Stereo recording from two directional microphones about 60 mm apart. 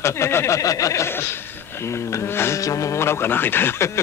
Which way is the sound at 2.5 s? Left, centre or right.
Left.